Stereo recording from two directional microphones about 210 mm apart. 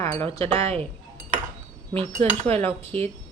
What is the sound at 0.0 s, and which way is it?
Chink, 10° left (ahead or behind).